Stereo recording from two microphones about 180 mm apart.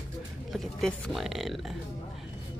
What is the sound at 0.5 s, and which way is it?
A woman's voice, centre (ahead or behind).